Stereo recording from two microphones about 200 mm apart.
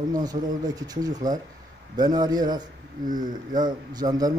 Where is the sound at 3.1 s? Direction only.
40° right (ahead or behind).